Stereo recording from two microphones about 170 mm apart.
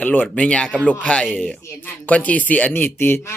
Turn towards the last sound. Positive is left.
turn(degrees=15)  # may be behind; listen again after turning